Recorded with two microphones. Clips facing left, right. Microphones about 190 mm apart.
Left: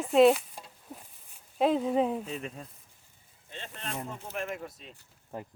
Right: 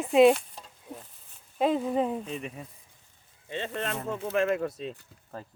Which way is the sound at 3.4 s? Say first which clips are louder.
Right 9 dB; 85° right.